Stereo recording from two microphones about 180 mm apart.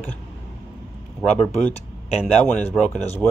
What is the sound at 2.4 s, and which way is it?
Dishes, 5° left (ahead or behind).